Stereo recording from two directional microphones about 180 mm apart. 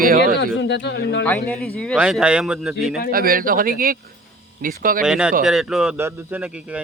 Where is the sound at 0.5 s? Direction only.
75° left (ahead or behind).